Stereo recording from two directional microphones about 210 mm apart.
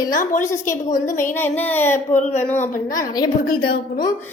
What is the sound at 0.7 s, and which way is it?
Speech, 35° left (ahead or behind).